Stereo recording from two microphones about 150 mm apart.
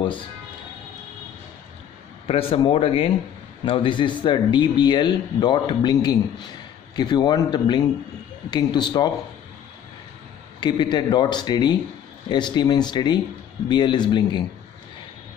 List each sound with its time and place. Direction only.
2.2 s a man's voice: 35° left (ahead or behind)
10.6 s a man's voice: 30° left (ahead or behind)